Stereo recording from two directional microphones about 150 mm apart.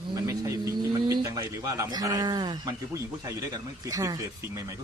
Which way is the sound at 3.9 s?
25° right (ahead or behind).